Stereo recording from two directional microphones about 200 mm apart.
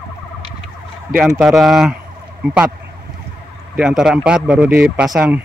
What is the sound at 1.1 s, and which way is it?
Speech, centre (ahead or behind).